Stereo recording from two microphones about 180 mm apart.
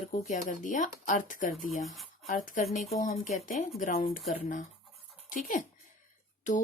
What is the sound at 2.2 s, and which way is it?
Speech, 50° left (ahead or behind).